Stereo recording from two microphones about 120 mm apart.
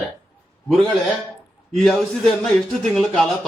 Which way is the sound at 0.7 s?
Centre (ahead or behind).